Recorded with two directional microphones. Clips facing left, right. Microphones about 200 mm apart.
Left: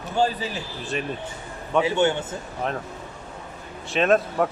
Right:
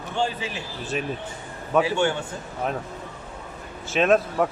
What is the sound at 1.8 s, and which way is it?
Speech, 20° left (ahead or behind).